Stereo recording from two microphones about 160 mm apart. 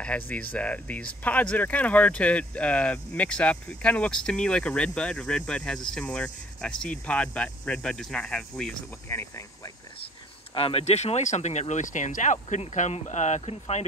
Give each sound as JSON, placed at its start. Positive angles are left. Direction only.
{"t": 0.0, "sound": "speech", "side_deg": 10}
{"t": 10.5, "sound": "speech", "side_deg": 35}